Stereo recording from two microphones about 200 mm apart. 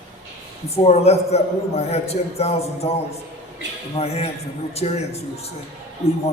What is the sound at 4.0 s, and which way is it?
A man's voice, 30° left (ahead or behind).